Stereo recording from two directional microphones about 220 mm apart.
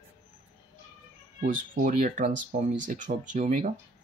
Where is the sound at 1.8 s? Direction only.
40° right (ahead or behind).